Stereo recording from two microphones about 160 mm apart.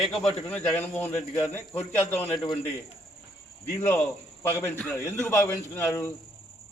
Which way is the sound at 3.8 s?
15° left (ahead or behind).